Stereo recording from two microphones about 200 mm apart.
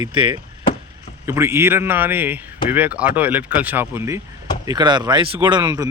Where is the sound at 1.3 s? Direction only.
10° right (ahead or behind).